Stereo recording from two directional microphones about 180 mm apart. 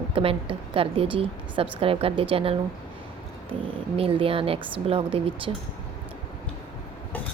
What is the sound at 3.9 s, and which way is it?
A woman's voice, 30° right (ahead or behind).